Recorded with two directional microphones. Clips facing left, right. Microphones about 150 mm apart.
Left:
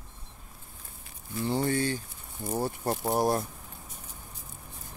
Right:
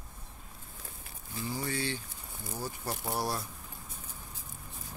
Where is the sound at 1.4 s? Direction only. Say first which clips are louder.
Left 8 dB; 60° left (ahead or behind).